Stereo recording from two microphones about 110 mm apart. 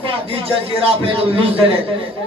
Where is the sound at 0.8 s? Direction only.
55° right (ahead or behind).